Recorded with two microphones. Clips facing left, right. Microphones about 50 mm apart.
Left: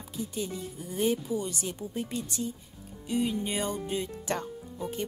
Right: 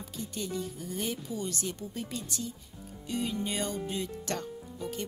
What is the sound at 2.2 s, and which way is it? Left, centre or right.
Speech, left.